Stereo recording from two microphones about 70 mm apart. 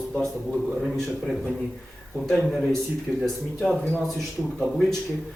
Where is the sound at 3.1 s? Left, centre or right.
Centre.